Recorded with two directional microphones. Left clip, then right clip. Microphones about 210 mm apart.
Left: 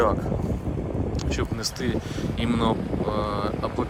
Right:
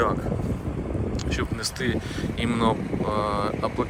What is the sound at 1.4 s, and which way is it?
Speech, 20° left (ahead or behind).